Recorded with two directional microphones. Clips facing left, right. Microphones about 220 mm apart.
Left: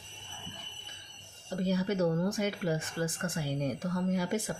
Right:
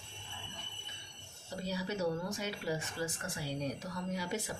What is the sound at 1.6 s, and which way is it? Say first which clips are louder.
Speech: left 7 dB; 50° left (ahead or behind).